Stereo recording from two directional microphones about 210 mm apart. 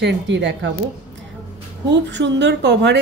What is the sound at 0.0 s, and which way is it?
Speech, 55° right (ahead or behind).